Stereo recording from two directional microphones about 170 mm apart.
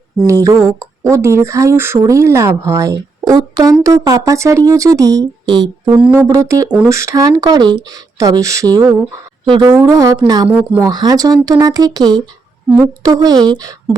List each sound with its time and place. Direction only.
0.3 s speech: 20° right (ahead or behind)